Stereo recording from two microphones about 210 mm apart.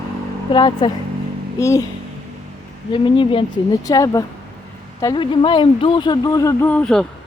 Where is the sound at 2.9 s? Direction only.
25° left (ahead or behind); by 7.0 s 5° left (ahead or behind).